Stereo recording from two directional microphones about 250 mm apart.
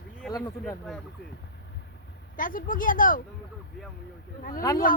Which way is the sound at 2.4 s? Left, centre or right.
Left.